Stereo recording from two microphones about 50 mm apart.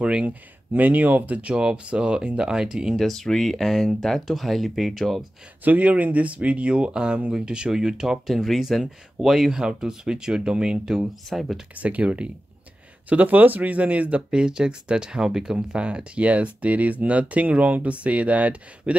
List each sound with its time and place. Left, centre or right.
0.0 s speech: right
3.0 s speech: centre
5.6 s speech: right; by 11.0 s centre
11.0 s speech: centre
11.7 s speech: right
14.3 s speech: centre